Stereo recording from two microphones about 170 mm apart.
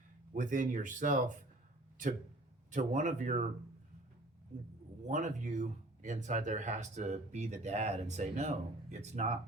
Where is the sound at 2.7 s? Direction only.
50° right (ahead or behind).